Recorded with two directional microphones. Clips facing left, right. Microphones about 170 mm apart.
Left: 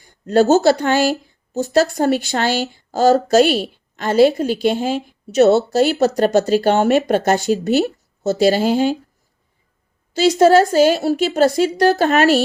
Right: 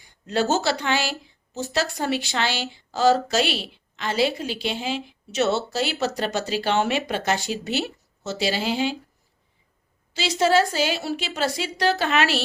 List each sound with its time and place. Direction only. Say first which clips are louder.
0.0 s speech: left 10 dB; 45° left (ahead or behind)
10.2 s speech: left 9 dB; 45° left (ahead or behind)